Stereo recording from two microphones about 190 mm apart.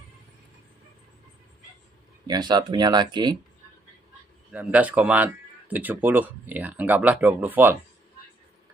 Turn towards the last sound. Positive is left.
turn(degrees=-10)  # may be behind; listen again after turning